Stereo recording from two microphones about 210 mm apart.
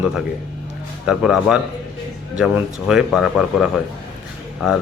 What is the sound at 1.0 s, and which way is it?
Speech, 5° right (ahead or behind).